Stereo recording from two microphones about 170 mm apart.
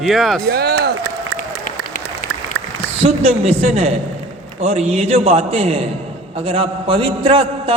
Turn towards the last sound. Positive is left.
turn(degrees=-30)  # may be behind; listen again after turning